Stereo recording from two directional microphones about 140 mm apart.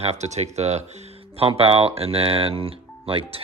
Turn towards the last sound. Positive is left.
turn(degrees=-40)  # may be behind; listen again after turning